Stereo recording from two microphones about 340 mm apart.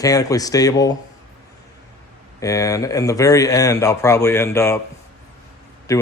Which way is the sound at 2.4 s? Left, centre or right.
Centre.